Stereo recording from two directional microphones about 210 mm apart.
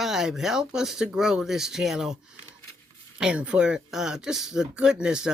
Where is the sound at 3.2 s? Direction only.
5° right (ahead or behind).